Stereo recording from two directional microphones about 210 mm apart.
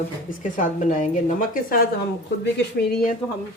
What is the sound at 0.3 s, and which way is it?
Speech, 40° left (ahead or behind).